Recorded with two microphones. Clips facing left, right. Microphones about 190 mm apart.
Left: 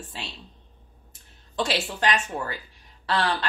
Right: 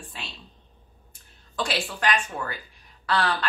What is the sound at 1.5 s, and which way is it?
A woman's voice, 25° left (ahead or behind).